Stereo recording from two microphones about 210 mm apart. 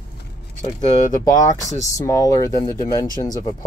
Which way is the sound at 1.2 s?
15° left (ahead or behind).